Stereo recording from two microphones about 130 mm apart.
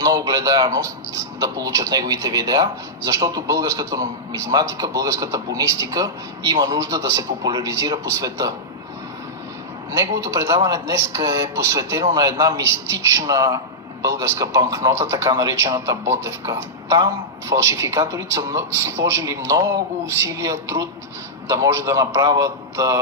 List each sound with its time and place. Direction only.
0.0 s a man's voice: 30° right (ahead or behind)
9.9 s a man's voice: 20° right (ahead or behind)